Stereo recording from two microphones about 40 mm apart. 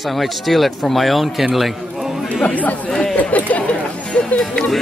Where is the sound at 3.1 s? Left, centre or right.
Left.